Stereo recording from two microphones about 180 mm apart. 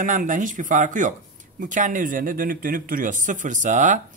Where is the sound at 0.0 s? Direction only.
45° right (ahead or behind).